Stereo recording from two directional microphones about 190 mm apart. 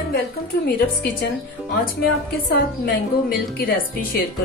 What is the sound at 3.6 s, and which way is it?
Speech, 50° left (ahead or behind).